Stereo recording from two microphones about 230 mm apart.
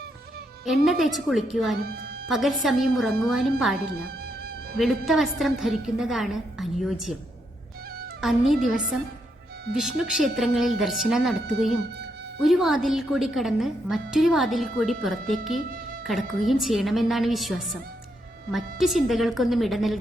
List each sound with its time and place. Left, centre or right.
0.6 s a woman's voice: centre
1.8 s a woman's voice: right
2.2 s a woman's voice: centre
4.8 s a woman's voice: centre
8.2 s a woman's voice: centre
12.4 s a woman's voice: centre